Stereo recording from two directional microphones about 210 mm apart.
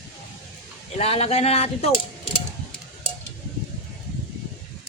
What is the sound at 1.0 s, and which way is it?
Speech, 30° left (ahead or behind).